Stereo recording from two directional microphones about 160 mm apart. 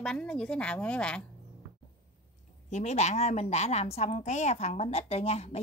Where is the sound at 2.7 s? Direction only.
45° left (ahead or behind).